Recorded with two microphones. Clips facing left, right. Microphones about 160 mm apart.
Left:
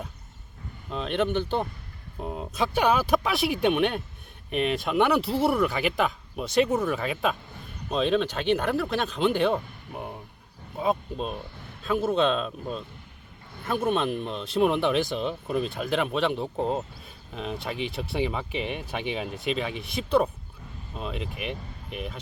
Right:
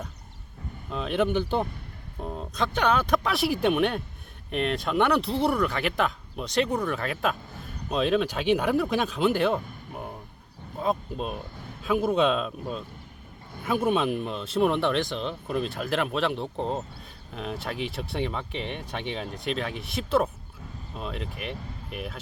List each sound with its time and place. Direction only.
0.9 s speech: centre (ahead or behind)
2.2 s speech: 10° left (ahead or behind)
11.8 s speech: 10° right (ahead or behind)